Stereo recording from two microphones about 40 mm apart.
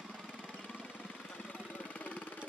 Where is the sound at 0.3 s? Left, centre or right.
Left.